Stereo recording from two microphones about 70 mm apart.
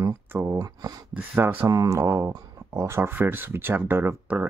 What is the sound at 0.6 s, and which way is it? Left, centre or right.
Speech, right.